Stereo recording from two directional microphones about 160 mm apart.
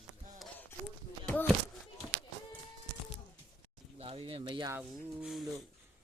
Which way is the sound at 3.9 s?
35° right (ahead or behind).